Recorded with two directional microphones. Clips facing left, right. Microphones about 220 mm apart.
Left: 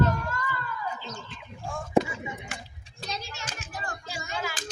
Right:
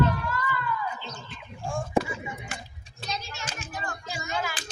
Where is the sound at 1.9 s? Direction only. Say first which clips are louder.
Left 4 dB; 20° left (ahead or behind).